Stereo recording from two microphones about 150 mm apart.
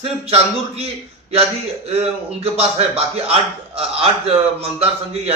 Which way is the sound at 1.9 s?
40° right (ahead or behind).